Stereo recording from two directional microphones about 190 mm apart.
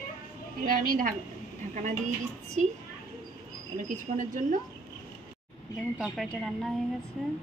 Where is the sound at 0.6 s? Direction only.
50° right (ahead or behind).